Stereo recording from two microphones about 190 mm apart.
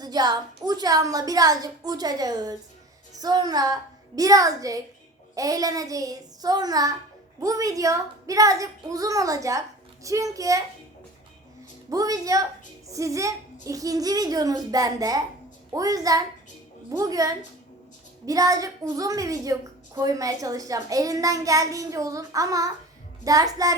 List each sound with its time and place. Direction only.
0.0 s a woman's voice: 20° right (ahead or behind)
11.9 s a woman's voice: 20° right (ahead or behind)